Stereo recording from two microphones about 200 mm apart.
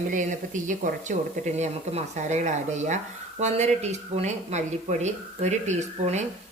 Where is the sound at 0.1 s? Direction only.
40° right (ahead or behind).